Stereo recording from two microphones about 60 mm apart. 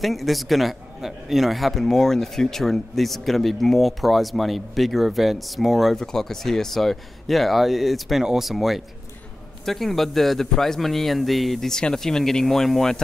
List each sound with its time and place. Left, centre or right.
0.0 s a man's voice: centre